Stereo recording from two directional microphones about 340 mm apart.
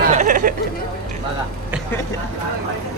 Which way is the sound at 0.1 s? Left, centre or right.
Right.